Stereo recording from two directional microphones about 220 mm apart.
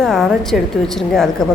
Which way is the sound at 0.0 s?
Centre (ahead or behind).